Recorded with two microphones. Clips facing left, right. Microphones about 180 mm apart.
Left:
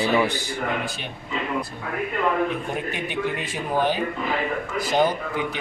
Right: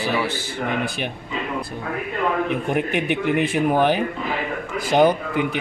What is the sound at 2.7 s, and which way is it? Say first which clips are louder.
Speech: right 7 dB; 65° right (ahead or behind).